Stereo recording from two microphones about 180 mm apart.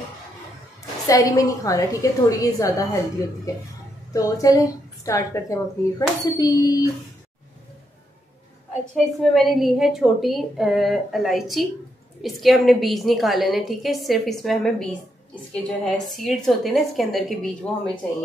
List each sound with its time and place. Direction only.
1.0 s a woman's voice: 20° left (ahead or behind)
4.1 s a woman's voice: 20° left (ahead or behind)
8.9 s a woman's voice: centre (ahead or behind)